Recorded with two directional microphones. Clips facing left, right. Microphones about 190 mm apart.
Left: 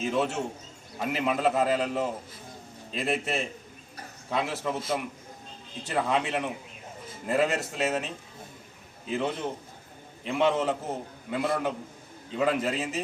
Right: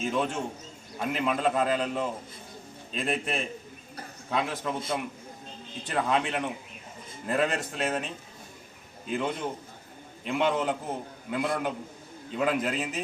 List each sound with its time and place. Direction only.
0.0 s a man's voice: 5° left (ahead or behind)